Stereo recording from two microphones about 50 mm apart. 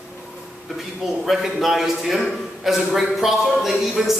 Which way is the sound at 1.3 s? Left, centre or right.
Centre.